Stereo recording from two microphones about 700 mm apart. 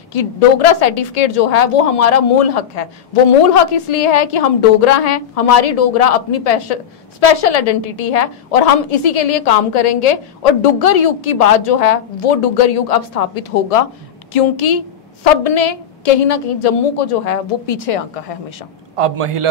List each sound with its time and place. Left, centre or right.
0.1 s a woman's voice: left
18.9 s a man's voice: right